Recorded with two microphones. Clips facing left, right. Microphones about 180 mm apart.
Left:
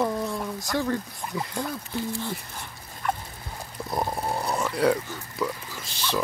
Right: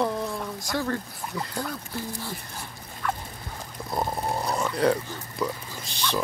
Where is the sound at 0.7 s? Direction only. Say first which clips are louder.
Left 2 dB; 15° left (ahead or behind).